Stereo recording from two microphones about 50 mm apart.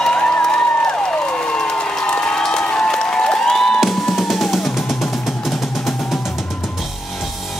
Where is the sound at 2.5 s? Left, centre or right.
Centre.